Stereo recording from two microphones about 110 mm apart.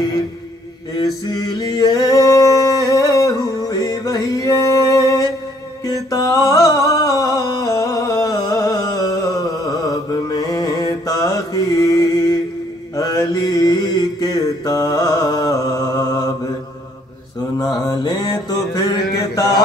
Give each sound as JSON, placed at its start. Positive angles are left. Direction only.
{"t": 0.9, "sound": "a sound", "side_deg": 35}
{"t": 4.7, "sound": "music", "side_deg": 35}
{"t": 12.9, "sound": "mantra", "side_deg": 35}
{"t": 17.6, "sound": "mantra", "side_deg": 35}